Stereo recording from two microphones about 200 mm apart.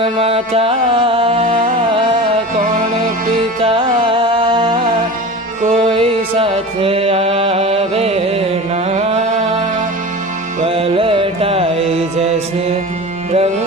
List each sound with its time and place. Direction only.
0.0 s music: 30° right (ahead or behind)
2.6 s music: 45° right (ahead or behind)
3.6 s music: 25° right (ahead or behind)
5.6 s music: 35° right (ahead or behind)